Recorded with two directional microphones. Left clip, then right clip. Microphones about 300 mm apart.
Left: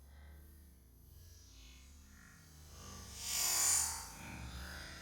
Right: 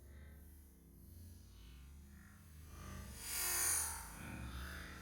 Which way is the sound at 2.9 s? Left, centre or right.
Centre.